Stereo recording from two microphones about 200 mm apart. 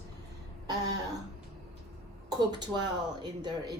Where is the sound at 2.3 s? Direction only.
20° right (ahead or behind).